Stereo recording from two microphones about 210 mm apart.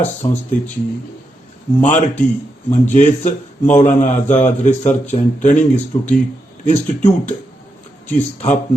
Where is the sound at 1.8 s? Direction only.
35° left (ahead or behind).